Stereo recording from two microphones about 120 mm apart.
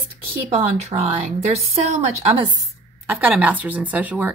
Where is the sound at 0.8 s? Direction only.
65° right (ahead or behind).